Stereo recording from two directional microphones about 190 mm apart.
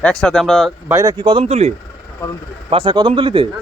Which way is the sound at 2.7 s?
25° right (ahead or behind).